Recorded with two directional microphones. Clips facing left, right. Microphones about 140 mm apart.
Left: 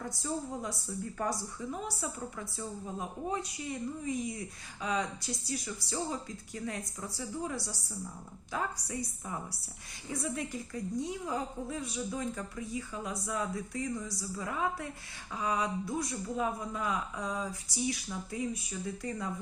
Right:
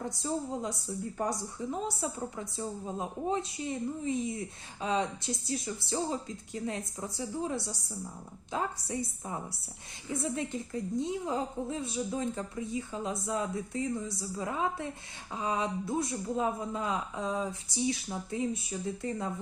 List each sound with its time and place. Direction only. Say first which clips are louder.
0.0 s a woman's voice: right 3 dB; 20° right (ahead or behind)